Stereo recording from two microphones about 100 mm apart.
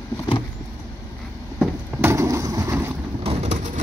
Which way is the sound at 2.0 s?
30° right (ahead or behind).